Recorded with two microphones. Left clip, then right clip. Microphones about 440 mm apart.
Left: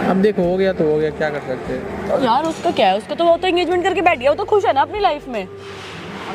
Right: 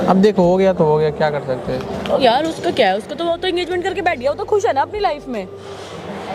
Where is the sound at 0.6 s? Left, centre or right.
Right.